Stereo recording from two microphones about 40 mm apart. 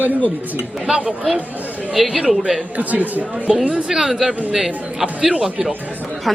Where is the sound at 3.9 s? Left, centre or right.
Centre.